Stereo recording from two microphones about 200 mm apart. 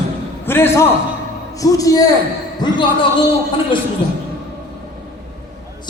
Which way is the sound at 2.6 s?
20° left (ahead or behind).